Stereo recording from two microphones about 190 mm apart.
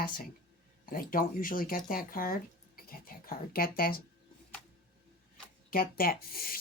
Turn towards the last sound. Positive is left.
turn(degrees=50)  # may be behind; listen again after turning